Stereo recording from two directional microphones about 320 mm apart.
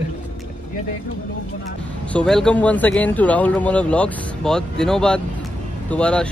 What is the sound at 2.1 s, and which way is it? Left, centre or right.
Speech, centre.